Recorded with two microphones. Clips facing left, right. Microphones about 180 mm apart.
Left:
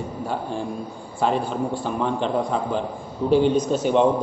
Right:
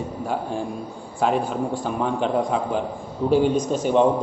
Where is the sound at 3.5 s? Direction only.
45° right (ahead or behind).